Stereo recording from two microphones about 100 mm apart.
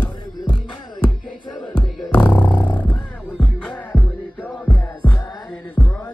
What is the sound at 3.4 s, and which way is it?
Music, 5° left (ahead or behind).